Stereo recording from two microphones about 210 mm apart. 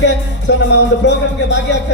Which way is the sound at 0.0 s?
55° left (ahead or behind).